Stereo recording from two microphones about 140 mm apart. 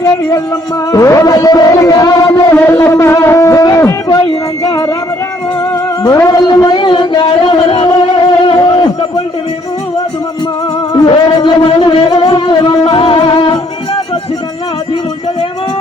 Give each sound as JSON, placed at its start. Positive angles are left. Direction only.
{"t": 0.0, "sound": "music", "side_deg": 25}
{"t": 6.0, "sound": "music", "side_deg": 25}
{"t": 10.9, "sound": "music", "side_deg": 35}